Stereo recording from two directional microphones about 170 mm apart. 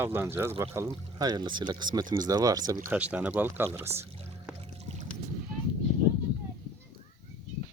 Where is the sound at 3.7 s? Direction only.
15° right (ahead or behind).